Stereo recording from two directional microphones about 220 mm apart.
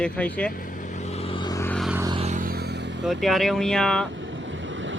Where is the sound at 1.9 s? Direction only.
10° right (ahead or behind).